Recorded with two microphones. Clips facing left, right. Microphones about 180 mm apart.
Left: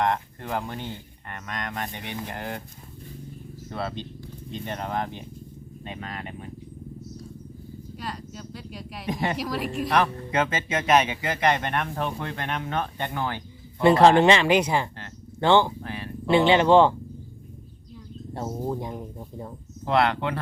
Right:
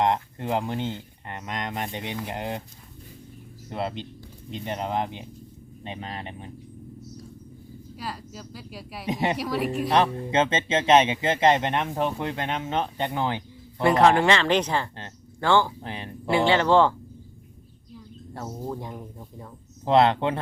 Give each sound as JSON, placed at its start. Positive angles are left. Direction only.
{"t": 0.0, "sound": "speech", "side_deg": -20}
{"t": 3.7, "sound": "speech", "side_deg": -20}
{"t": 7.9, "sound": "speech", "side_deg": -5}
{"t": 9.0, "sound": "speech", "side_deg": -20}
{"t": 9.4, "sound": "speech", "side_deg": 0}
{"t": 9.9, "sound": "speech", "side_deg": -25}
{"t": 13.8, "sound": "speech", "side_deg": 30}
{"t": 15.8, "sound": "speech", "side_deg": -20}
{"t": 16.3, "sound": "speech", "side_deg": 20}
{"t": 18.3, "sound": "speech", "side_deg": 25}
{"t": 19.8, "sound": "speech", "side_deg": -20}